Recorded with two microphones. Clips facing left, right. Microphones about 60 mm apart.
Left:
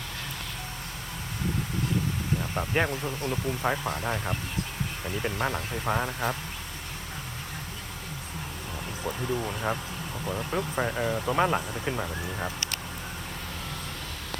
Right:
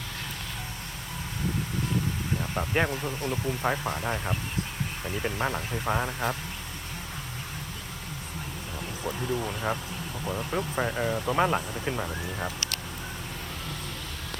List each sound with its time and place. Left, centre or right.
2.4 s speech: centre
3.2 s speech: centre
3.6 s speech: centre
9.0 s speech: centre